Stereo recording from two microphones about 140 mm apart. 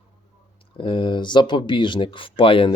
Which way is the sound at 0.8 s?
35° left (ahead or behind).